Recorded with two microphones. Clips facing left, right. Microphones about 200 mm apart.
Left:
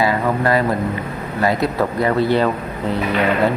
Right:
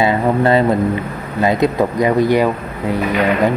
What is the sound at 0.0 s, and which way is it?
Speech, 25° right (ahead or behind).